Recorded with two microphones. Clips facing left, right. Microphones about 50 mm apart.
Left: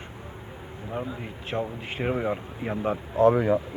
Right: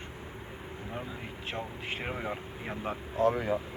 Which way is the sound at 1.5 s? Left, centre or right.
Centre.